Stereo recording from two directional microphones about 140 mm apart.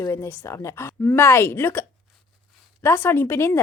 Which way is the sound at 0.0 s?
20° left (ahead or behind).